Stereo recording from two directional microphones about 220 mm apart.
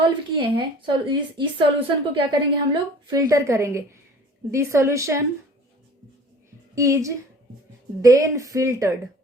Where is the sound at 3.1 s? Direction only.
15° right (ahead or behind).